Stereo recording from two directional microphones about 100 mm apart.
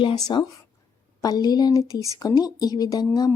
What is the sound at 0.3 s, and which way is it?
Speech, 50° left (ahead or behind).